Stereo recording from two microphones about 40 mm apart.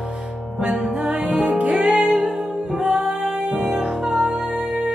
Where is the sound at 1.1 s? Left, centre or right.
Right.